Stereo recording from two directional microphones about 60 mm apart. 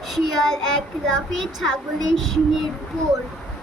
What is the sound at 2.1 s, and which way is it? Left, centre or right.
Speech, centre.